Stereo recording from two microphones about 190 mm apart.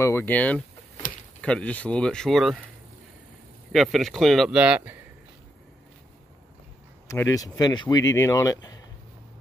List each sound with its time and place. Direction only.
0.0 s speech: 10° left (ahead or behind)
3.7 s speech: centre (ahead or behind)
7.1 s speech: 15° left (ahead or behind)